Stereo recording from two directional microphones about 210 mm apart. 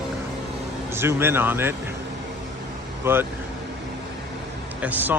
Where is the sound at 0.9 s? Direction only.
10° right (ahead or behind).